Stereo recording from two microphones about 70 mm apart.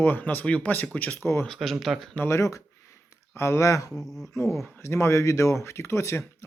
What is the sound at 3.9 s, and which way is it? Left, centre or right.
Speech, centre.